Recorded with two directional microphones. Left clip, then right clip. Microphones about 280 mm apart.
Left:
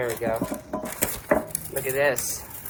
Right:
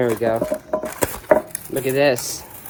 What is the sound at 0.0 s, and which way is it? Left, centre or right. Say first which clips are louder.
Speech: right 7 dB; right.